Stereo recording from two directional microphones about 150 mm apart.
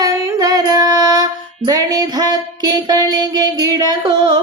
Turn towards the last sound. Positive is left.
turn(degrees=-25)  # may be behind; listen again after turning